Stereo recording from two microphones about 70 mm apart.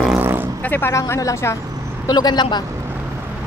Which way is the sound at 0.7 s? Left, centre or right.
Left.